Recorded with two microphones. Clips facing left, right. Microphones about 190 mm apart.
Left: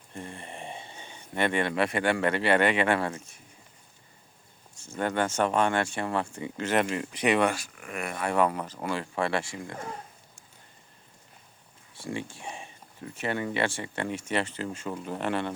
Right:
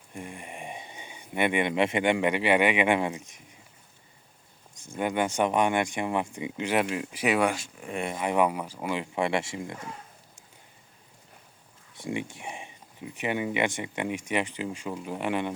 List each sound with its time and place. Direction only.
0.1 s speech: 15° right (ahead or behind)
4.8 s speech: 15° right (ahead or behind)
7.5 s speech: 25° right (ahead or behind)
11.9 s speech: 20° right (ahead or behind)